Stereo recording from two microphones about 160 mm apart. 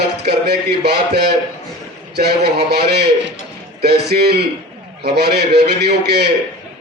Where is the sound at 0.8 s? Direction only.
90° right.